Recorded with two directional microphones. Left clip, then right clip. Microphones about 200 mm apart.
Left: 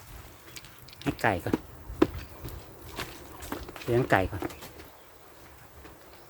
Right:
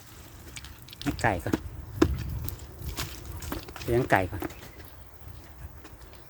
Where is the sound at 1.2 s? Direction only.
Centre (ahead or behind).